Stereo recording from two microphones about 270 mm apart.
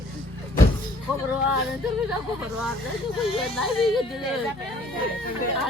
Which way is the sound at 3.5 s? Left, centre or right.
Centre.